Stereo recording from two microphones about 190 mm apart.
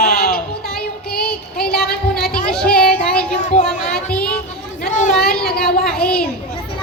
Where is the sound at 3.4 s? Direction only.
40° left (ahead or behind).